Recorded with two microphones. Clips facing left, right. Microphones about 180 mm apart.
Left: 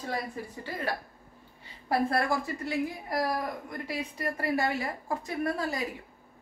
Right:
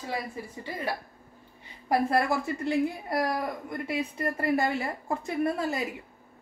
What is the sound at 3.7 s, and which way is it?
Speech, 25° right (ahead or behind).